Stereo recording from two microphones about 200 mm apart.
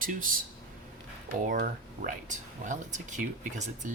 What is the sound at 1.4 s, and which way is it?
Speech, 45° right (ahead or behind).